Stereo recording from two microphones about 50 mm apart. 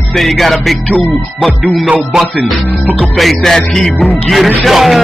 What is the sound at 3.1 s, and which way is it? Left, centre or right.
Music, centre.